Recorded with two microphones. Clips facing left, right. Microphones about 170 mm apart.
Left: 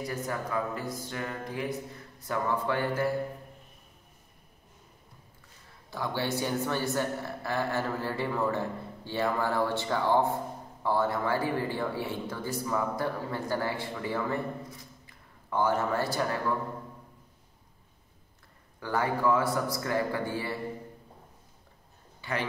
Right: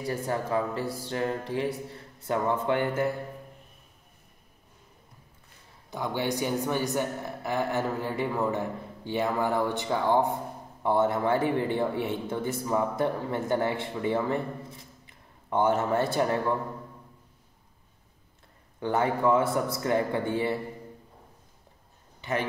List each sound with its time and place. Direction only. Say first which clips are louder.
0.0 s speech: right 4 dB; 30° right (ahead or behind)
5.9 s speech: right 2 dB; 20° right (ahead or behind)
18.8 s speech: right 3 dB; 25° right (ahead or behind)